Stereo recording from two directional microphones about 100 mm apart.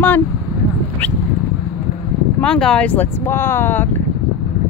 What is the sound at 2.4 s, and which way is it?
Speech, 5° left (ahead or behind).